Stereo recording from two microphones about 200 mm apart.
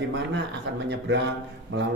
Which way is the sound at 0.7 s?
65° right (ahead or behind).